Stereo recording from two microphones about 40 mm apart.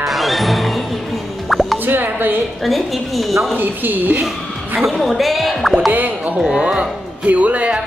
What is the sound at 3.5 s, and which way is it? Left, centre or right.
Speech, right.